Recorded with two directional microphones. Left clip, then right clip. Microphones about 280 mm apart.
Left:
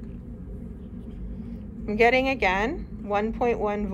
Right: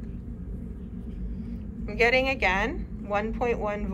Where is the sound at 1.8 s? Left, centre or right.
Left.